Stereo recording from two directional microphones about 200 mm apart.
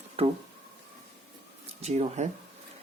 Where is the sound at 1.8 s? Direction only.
30° right (ahead or behind).